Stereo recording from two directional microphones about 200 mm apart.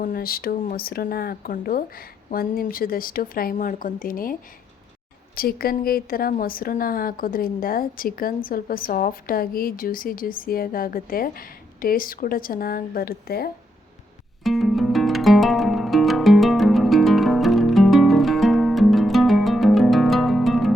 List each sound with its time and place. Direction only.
0.0 s speech: 45° left (ahead or behind)
14.4 s music: centre (ahead or behind)